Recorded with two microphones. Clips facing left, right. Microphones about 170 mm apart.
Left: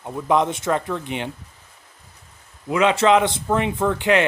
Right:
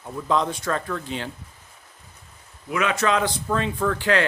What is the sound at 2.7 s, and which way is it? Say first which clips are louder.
A man's voice: left 6 dB; 25° left (ahead or behind).